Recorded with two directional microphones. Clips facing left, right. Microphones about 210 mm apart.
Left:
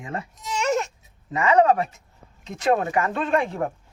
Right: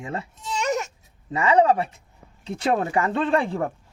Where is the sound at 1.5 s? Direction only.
30° right (ahead or behind).